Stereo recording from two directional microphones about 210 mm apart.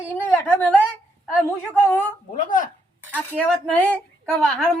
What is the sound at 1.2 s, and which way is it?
Speech, 10° left (ahead or behind).